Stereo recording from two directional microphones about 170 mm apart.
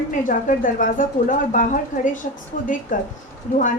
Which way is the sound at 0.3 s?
50° left (ahead or behind).